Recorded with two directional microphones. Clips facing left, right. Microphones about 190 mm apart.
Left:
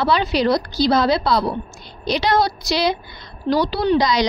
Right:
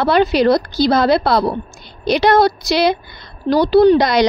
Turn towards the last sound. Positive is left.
turn(degrees=-60)  # may be behind; listen again after turning